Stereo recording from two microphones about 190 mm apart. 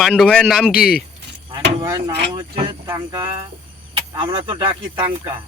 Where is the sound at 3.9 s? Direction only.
25° right (ahead or behind).